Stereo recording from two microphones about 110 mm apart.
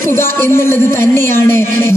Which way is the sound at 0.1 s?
25° left (ahead or behind).